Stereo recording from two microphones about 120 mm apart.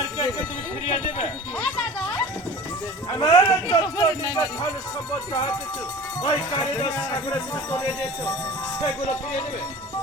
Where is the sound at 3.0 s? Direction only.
30° left (ahead or behind).